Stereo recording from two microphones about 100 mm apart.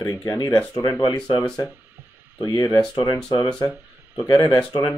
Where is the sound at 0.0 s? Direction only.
40° left (ahead or behind).